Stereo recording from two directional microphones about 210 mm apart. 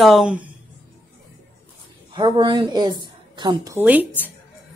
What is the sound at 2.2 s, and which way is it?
Speech, 25° right (ahead or behind).